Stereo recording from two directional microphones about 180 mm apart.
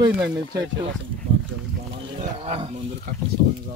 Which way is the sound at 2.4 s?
30° right (ahead or behind).